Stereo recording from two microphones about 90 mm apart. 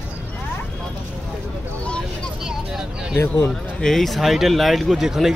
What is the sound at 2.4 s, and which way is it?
Vehicle, 5° right (ahead or behind).